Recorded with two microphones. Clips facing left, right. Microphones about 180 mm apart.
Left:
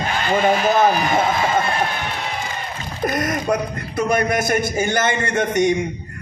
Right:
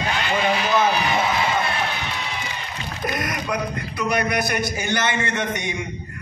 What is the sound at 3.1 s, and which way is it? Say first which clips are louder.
A man's voice: left 6 dB; 45° left (ahead or behind).